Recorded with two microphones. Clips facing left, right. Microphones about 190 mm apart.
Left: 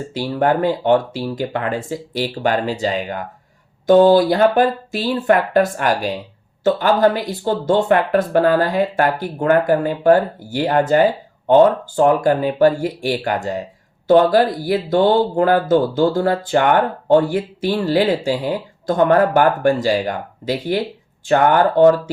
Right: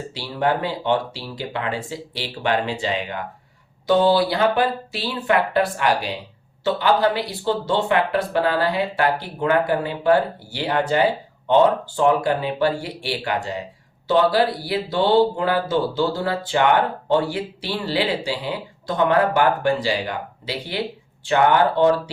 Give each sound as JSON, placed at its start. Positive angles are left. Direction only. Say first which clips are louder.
{"t": 0.1, "sound": "speech", "louder": "left 5 dB", "side_deg": 50}